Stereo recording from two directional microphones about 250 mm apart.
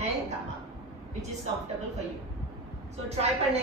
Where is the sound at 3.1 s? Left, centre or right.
Right.